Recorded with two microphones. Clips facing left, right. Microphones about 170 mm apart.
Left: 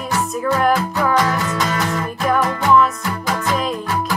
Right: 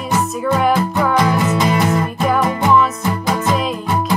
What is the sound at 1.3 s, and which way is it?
Music, 20° right (ahead or behind).